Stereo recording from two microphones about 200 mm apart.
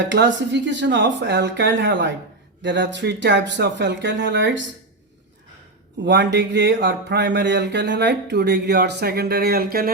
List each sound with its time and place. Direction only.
0.1 s speech: 60° right (ahead or behind)
6.1 s speech: 60° right (ahead or behind)